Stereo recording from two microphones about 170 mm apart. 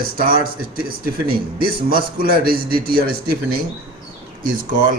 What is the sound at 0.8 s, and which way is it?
A man's voice, 60° right (ahead or behind).